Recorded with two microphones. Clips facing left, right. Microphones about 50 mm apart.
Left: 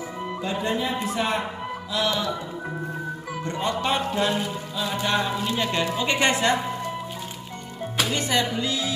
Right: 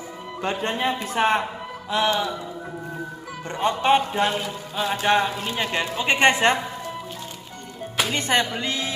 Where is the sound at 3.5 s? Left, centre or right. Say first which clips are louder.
Right 6 dB; right.